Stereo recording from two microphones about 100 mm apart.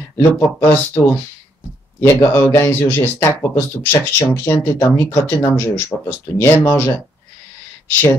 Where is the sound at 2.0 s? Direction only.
25° left (ahead or behind).